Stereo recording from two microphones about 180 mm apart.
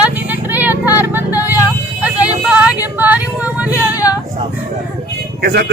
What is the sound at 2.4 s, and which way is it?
Female singing, 5° right (ahead or behind).